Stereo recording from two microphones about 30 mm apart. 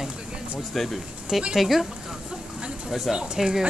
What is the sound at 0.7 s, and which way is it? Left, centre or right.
Speech, centre.